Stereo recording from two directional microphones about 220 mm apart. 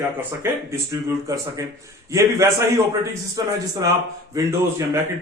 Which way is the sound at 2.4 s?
15° right (ahead or behind).